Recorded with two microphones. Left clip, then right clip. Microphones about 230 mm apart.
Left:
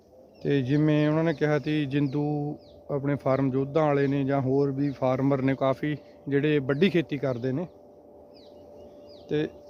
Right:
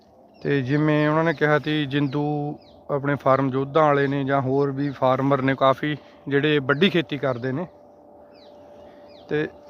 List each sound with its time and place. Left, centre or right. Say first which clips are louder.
0.4 s speech: right 3 dB; centre
9.3 s speech: right 3 dB; centre